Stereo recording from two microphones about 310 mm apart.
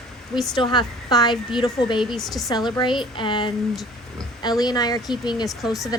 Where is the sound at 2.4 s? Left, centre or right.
Centre.